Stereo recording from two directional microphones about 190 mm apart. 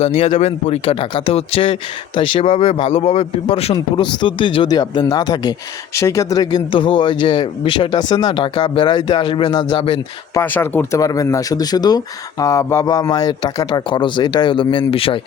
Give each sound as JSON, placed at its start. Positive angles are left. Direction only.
{"t": 0.0, "sound": "speech", "side_deg": 35}
{"t": 10.3, "sound": "speech", "side_deg": 10}